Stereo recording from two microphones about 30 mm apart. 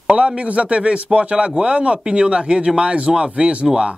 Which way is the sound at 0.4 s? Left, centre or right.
Right.